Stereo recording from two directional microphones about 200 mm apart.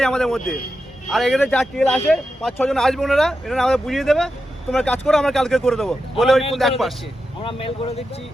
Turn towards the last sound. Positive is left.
turn(degrees=30)  # may be behind; listen again after turning